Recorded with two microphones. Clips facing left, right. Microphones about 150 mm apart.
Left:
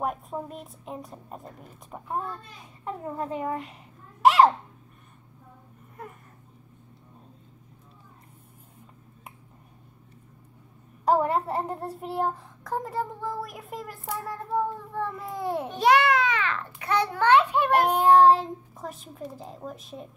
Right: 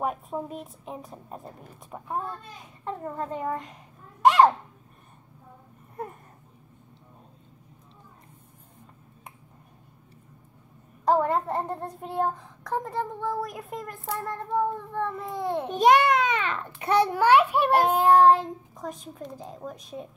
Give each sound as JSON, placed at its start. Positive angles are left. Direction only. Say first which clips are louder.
{"t": 0.0, "sound": "a child's voice", "louder": "right 1 dB", "side_deg": 0}
{"t": 2.8, "sound": "a child's voice", "louder": "even", "side_deg": 10}
{"t": 11.1, "sound": "a child's voice", "louder": "even", "side_deg": 5}
{"t": 15.7, "sound": "a child's voice", "louder": "right 2 dB", "side_deg": -20}
{"t": 17.2, "sound": "a child's voice", "louder": "left 2 dB", "side_deg": -10}
{"t": 17.8, "sound": "a child's voice", "louder": "left 1 dB", "side_deg": 0}